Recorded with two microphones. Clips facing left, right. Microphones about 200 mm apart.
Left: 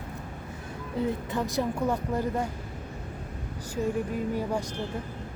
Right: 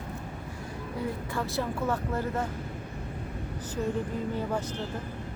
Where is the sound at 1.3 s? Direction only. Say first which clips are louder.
Left 3 dB; 20° left (ahead or behind).